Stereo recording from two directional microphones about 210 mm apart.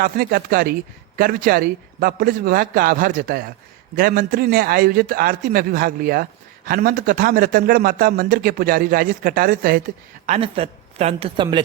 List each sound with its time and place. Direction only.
0.0 s speech: 45° right (ahead or behind)
10.2 s speech: 30° right (ahead or behind)